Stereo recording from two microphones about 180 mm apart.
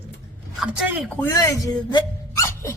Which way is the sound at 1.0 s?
5° left (ahead or behind).